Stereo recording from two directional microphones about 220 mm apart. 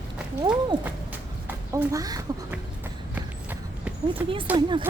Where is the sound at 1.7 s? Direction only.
15° right (ahead or behind).